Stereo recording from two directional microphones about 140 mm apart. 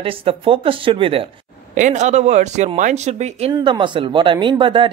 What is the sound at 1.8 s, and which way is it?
Speech, 60° right (ahead or behind).